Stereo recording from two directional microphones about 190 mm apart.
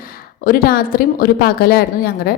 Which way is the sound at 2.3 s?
55° left (ahead or behind).